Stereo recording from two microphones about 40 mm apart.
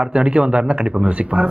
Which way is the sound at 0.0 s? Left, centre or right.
Right.